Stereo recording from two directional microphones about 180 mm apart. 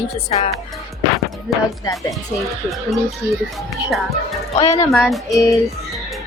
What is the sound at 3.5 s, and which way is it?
Speech, centre (ahead or behind).